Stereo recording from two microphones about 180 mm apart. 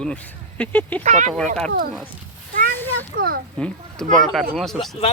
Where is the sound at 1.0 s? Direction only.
40° right (ahead or behind).